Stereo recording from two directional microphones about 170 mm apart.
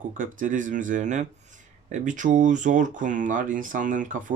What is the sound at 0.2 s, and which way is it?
Speech, 50° right (ahead or behind).